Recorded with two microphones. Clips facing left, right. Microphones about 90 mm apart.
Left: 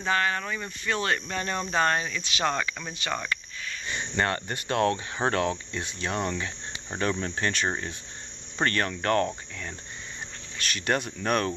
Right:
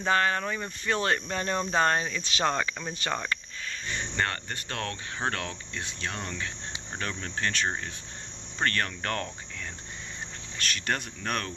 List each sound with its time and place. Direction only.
0.0 s speech: 35° right (ahead or behind)
3.9 s speech: 15° left (ahead or behind)
10.7 s speech: 5° left (ahead or behind)